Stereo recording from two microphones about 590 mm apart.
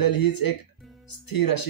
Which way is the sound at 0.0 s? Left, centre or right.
Left.